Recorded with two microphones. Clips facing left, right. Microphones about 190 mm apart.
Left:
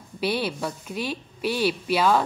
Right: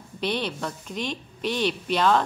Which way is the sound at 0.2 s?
5° left (ahead or behind).